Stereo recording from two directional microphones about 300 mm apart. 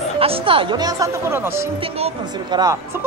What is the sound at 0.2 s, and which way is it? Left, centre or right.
Speech, centre.